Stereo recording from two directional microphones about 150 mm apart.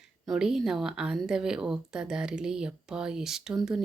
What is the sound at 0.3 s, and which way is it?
A woman's voice, 5° right (ahead or behind).